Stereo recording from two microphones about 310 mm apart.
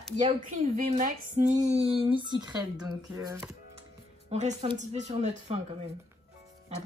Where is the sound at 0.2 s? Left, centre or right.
Centre.